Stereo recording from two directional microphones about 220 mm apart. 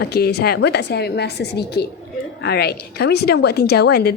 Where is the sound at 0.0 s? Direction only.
45° left (ahead or behind).